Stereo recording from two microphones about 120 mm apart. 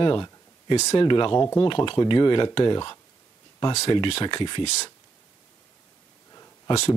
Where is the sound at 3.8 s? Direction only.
50° left (ahead or behind).